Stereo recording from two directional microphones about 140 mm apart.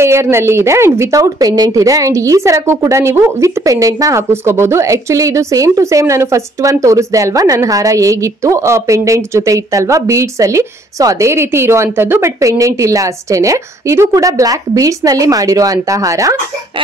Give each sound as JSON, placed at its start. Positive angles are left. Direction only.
{"t": 0.0, "sound": "a woman's voice", "side_deg": -20}